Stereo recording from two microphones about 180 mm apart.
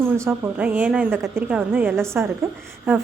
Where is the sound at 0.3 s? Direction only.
10° right (ahead or behind).